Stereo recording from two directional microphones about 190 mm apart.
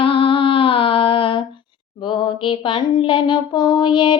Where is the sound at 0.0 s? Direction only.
30° left (ahead or behind).